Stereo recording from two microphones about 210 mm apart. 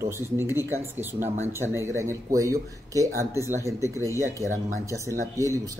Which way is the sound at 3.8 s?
15° left (ahead or behind).